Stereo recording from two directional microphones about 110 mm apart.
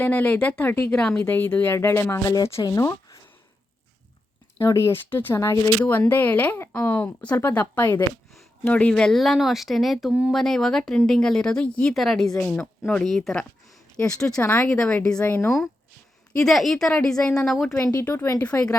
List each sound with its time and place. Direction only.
0.0 s speech: 15° left (ahead or behind)
1.5 s speech: 20° left (ahead or behind)
4.6 s speech: 25° left (ahead or behind)
15.4 s speech: centre (ahead or behind)
18.0 s speech: 20° left (ahead or behind)